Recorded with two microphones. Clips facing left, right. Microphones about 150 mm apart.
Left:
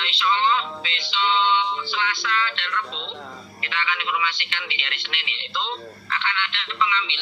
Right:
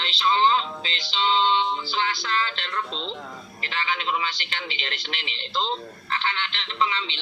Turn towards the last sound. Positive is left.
turn(degrees=-35)  # may be behind; listen again after turning